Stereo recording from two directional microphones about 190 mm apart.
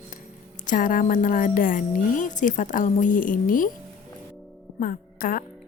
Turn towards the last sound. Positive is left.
turn(degrees=45)  # may be behind; listen again after turning